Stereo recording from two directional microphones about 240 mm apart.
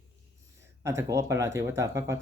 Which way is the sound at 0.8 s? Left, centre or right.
Centre.